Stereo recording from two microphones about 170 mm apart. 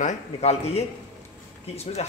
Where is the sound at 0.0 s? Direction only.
40° left (ahead or behind).